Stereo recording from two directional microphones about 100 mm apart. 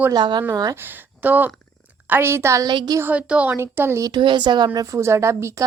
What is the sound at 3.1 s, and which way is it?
Speech, 15° right (ahead or behind).